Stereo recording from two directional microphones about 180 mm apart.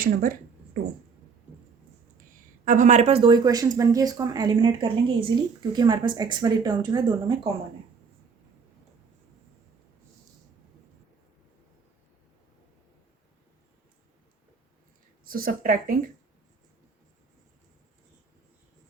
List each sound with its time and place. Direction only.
0.0 s speech: 50° right (ahead or behind)
2.6 s speech: 45° right (ahead or behind)
3.3 s speech: 20° right (ahead or behind)
15.3 s speech: 55° right (ahead or behind)